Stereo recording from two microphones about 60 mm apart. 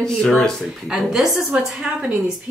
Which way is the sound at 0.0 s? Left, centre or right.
Centre.